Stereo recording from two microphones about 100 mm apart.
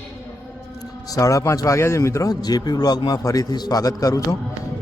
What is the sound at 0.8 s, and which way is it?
A man's voice, 35° left (ahead or behind).